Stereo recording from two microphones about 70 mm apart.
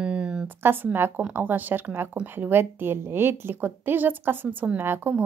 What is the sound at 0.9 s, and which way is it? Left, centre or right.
A woman's voice, right.